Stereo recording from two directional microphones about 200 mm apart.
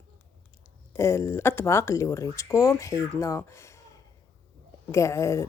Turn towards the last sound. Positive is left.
turn(degrees=15)  # may be behind; listen again after turning